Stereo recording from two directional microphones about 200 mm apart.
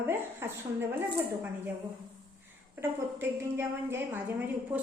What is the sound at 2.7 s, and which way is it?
A woman's voice, 10° right (ahead or behind).